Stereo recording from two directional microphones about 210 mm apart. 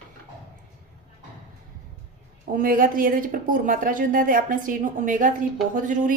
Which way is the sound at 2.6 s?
40° right (ahead or behind).